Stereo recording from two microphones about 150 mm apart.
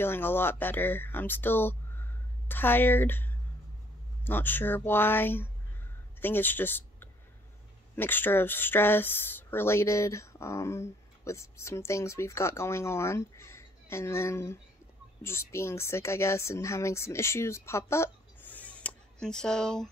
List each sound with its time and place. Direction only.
0.0 s speech: 15° left (ahead or behind)